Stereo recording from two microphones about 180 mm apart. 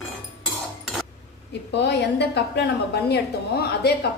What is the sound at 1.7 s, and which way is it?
A woman's voice, 70° left (ahead or behind).